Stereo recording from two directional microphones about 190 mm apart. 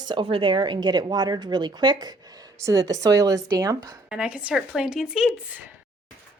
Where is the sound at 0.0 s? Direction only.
25° right (ahead or behind).